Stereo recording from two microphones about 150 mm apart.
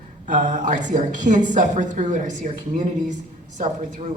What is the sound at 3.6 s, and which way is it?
Speech, 60° right (ahead or behind).